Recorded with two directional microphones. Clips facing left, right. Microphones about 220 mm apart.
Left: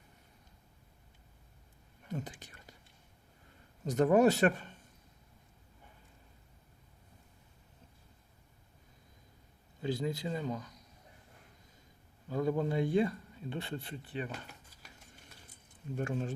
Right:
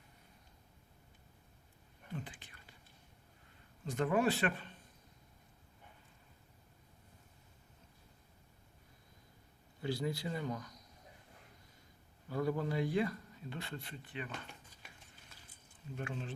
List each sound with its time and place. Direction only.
2.0 s whispering: 40° left (ahead or behind)
3.8 s speech: 40° left (ahead or behind)
9.8 s speech: 20° left (ahead or behind)
12.3 s speech: 20° left (ahead or behind)
16.0 s speech: 45° left (ahead or behind)